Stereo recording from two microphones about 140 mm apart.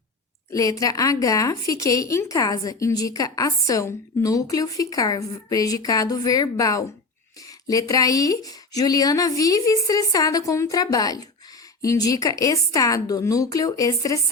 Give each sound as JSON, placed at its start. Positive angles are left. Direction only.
{"t": 0.5, "sound": "a woman's voice", "side_deg": 25}